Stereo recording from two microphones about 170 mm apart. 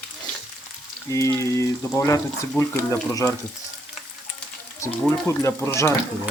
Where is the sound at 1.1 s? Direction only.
15° left (ahead or behind).